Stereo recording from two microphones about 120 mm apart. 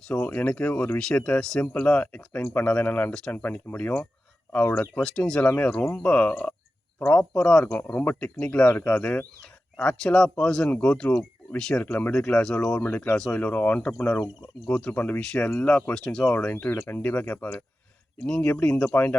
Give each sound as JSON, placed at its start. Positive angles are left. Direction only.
{"t": 0.1, "sound": "speech", "side_deg": 10}
{"t": 8.6, "sound": "speech", "side_deg": 20}
{"t": 8.9, "sound": "speech", "side_deg": 10}